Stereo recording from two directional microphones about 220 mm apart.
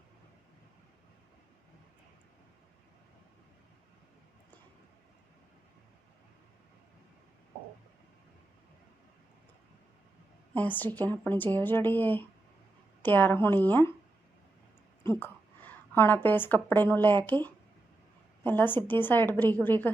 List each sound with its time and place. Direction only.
10.5 s a woman's voice: 10° left (ahead or behind)
15.2 s a woman's voice: 10° left (ahead or behind)